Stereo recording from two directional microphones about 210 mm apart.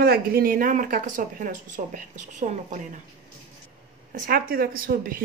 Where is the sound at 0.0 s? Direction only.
45° right (ahead or behind).